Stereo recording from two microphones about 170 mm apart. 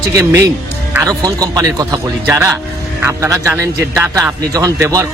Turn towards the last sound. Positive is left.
turn(degrees=-20)  # may be behind; listen again after turning